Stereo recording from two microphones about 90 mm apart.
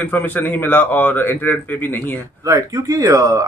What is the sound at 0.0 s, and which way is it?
A man's voice, 20° left (ahead or behind).